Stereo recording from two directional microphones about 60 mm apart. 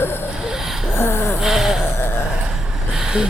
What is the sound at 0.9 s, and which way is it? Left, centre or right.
Snort, left.